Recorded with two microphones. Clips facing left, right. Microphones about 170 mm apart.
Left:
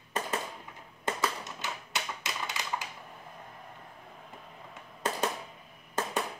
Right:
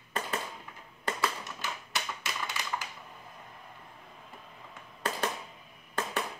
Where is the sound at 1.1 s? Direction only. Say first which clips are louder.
Left 1 dB; 20° left (ahead or behind).